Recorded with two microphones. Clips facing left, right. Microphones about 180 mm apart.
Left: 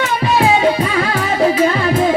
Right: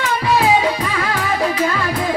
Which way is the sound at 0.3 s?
25° left (ahead or behind).